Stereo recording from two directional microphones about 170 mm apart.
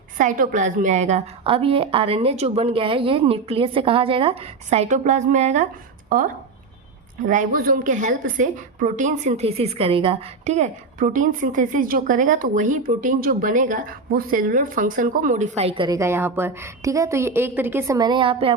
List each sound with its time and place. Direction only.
0.2 s a woman's voice: 50° right (ahead or behind)
7.3 s a woman's voice: 50° right (ahead or behind); by 16.0 s 30° right (ahead or behind)
16.0 s a woman's voice: 15° right (ahead or behind); by 18.5 s 30° right (ahead or behind)